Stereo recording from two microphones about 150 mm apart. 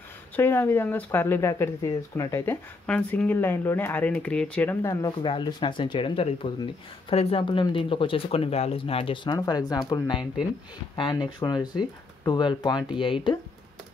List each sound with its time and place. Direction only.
0.4 s speech: 15° left (ahead or behind)
2.9 s speech: 10° left (ahead or behind)
5.0 s speech: 30° left (ahead or behind)